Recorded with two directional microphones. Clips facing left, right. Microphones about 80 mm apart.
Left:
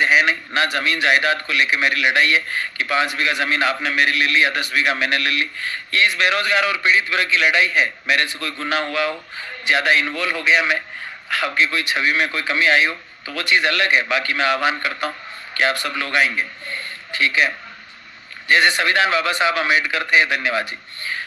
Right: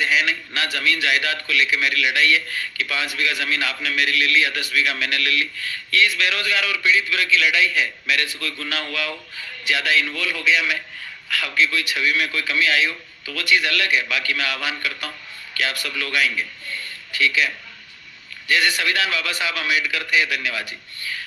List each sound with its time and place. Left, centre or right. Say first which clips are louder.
0.0 s a man's voice: left 4 dB; left